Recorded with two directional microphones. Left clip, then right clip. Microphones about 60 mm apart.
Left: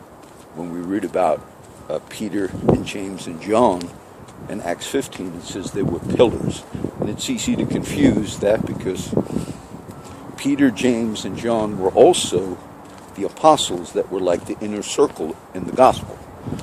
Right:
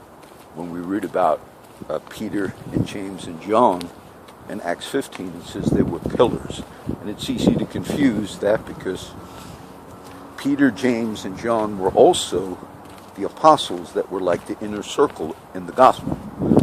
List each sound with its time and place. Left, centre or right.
0.9 s speech: left
1.9 s speech: left
2.3 s speech: left
10.3 s speech: left
11.8 s speech: left
14.3 s speech: left